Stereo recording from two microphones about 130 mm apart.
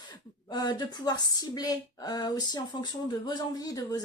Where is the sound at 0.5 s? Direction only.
30° left (ahead or behind).